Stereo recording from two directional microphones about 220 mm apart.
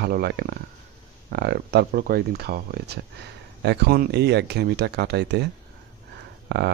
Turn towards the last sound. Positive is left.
turn(degrees=-50)  # may be behind; listen again after turning